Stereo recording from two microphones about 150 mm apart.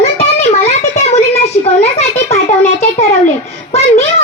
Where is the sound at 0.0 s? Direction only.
45° left (ahead or behind).